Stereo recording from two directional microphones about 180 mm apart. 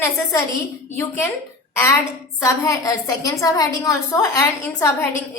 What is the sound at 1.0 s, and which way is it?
Speech, 15° left (ahead or behind).